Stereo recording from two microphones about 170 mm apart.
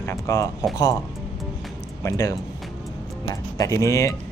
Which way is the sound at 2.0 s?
20° left (ahead or behind).